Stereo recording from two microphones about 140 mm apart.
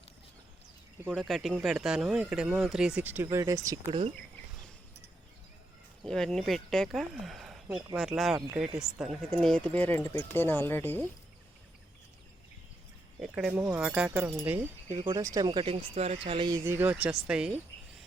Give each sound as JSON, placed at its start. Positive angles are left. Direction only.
{"t": 1.0, "sound": "speech", "side_deg": -5}
{"t": 6.0, "sound": "speech", "side_deg": 5}
{"t": 13.2, "sound": "speech", "side_deg": -5}
{"t": 14.3, "sound": "speech", "side_deg": -15}
{"t": 14.9, "sound": "speech", "side_deg": -30}
{"t": 16.6, "sound": "speech", "side_deg": -15}